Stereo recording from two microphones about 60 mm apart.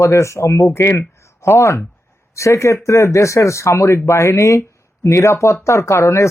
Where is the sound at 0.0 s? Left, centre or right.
Left.